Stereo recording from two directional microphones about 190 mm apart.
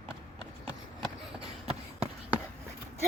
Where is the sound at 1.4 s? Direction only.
30° right (ahead or behind).